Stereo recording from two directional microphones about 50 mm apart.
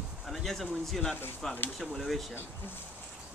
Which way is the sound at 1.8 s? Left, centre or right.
Centre.